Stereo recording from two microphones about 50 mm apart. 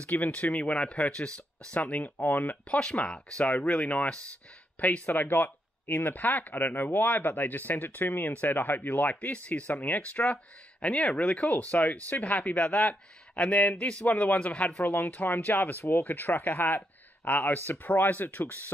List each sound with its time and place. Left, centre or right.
0.0 s a man's voice: left
2.7 s a man's voice: left
10.2 s a man's voice: left
14.9 s speech: left